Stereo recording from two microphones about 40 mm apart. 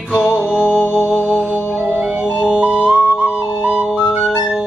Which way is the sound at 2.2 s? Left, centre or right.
Right.